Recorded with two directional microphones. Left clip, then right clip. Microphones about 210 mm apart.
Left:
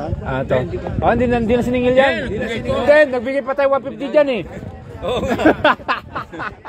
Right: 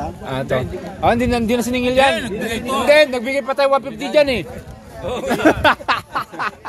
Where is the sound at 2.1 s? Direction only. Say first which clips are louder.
Even; 50° right (ahead or behind).